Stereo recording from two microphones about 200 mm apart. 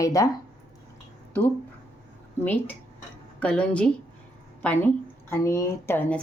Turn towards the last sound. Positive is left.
turn(degrees=5)  # may be behind; listen again after turning